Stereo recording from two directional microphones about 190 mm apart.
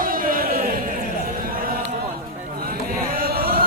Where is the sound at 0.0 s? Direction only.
45° right (ahead or behind).